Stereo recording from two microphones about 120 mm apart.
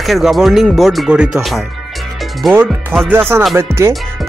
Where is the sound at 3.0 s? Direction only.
20° right (ahead or behind).